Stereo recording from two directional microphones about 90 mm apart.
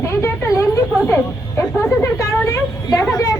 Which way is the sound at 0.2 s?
35° left (ahead or behind).